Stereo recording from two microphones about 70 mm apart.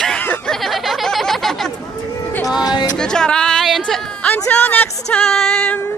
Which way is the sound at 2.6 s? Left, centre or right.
Left.